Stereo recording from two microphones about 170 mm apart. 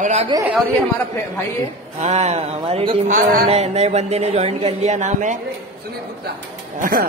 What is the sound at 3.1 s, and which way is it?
Speech, 50° right (ahead or behind).